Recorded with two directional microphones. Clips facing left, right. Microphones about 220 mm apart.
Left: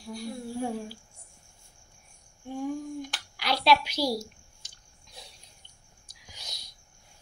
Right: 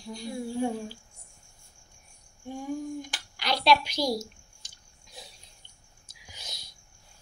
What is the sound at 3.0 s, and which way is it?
Clicking, 5° left (ahead or behind).